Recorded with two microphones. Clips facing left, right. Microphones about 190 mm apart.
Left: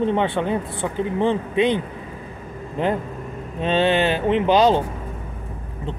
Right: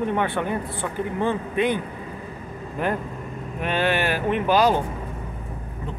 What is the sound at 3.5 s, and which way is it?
Speech, 25° left (ahead or behind).